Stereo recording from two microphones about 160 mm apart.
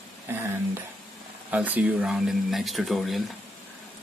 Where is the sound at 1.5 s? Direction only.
10° right (ahead or behind).